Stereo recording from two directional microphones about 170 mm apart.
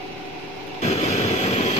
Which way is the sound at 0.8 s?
40° left (ahead or behind).